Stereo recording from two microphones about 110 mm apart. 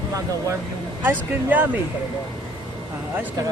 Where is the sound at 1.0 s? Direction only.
15° right (ahead or behind).